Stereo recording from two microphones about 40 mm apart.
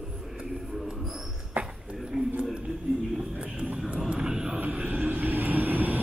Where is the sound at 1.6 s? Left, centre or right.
Right.